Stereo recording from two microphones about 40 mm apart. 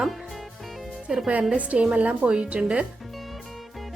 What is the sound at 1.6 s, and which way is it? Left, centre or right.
Speech, right.